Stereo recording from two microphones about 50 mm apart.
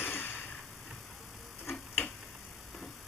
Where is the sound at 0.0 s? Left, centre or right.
Left.